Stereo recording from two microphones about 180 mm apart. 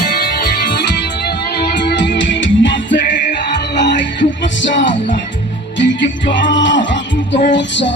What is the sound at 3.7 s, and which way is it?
Music, 80° left.